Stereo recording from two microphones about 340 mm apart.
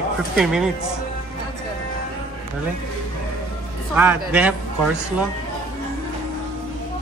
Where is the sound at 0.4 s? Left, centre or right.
Centre.